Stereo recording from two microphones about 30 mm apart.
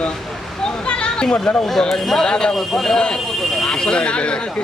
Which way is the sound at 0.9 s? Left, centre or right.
Left.